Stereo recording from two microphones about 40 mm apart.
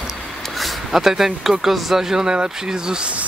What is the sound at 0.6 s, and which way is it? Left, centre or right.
Speech, centre.